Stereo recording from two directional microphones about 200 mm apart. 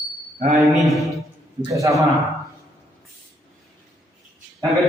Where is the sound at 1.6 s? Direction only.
15° right (ahead or behind).